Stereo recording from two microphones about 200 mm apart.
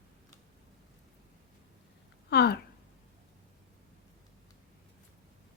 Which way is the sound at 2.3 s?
55° left (ahead or behind).